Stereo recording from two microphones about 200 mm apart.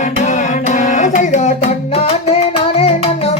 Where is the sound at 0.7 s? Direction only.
40° left (ahead or behind).